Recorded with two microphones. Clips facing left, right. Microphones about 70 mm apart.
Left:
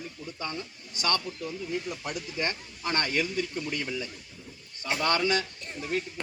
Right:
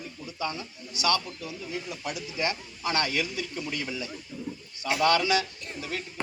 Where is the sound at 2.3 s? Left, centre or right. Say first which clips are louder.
Right 2 dB; left.